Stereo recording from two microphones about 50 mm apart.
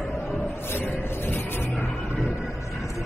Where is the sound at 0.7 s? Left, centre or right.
Left.